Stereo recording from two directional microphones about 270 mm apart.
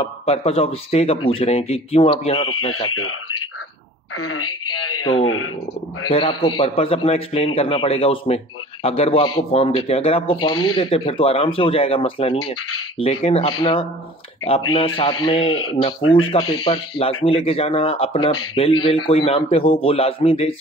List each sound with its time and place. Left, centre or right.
0.0 s a man's voice: left
2.9 s speech: left
4.2 s speech: left
6.0 s a man's voice: centre
10.5 s speech: left
10.8 s a man's voice: centre
16.0 s speech: left
16.6 s a man's voice: centre